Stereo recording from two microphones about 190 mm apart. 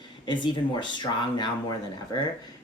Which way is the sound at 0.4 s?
25° left (ahead or behind).